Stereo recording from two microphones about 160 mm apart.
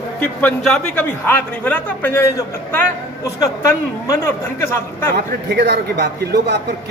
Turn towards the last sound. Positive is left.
turn(degrees=-90)